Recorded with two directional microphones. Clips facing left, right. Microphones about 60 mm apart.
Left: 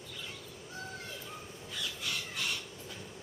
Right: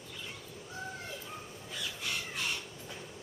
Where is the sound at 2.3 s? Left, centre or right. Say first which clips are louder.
Even; right.